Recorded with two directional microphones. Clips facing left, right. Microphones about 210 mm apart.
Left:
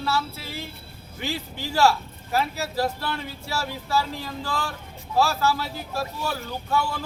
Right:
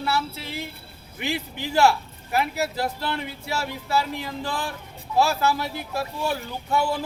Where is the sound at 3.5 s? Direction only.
20° right (ahead or behind).